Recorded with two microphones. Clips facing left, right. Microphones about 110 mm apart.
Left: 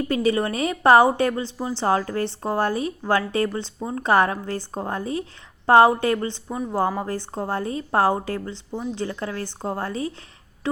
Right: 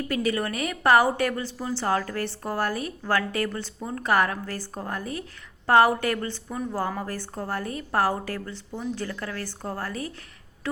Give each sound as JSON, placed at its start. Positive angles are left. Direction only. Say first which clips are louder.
{"t": 0.1, "sound": "a woman's voice", "louder": "left 4 dB", "side_deg": 30}